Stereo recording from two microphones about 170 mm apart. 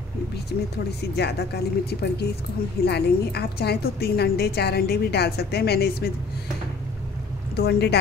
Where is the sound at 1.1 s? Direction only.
75° left (ahead or behind).